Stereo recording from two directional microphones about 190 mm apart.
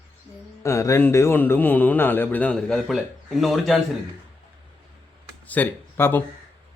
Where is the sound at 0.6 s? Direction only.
15° left (ahead or behind); by 3.7 s centre (ahead or behind).